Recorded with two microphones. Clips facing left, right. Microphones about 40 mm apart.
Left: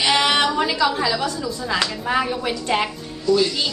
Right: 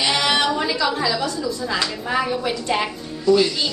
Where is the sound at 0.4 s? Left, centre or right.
Centre.